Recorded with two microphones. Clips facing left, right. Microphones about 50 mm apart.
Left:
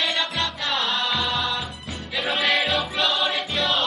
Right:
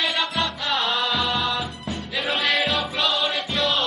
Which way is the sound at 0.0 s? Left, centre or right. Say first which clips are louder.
Right 1 dB; centre.